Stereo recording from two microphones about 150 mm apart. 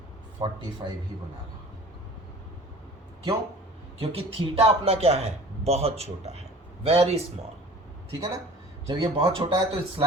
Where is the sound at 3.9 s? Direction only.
40° right (ahead or behind).